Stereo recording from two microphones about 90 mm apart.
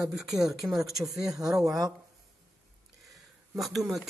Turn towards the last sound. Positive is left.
turn(degrees=0)  # may be behind; listen again after turning